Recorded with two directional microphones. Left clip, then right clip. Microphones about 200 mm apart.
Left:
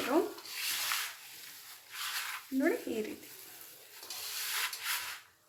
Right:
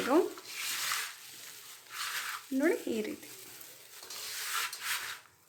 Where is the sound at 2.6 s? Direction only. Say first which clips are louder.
Right 2 dB; 25° right (ahead or behind).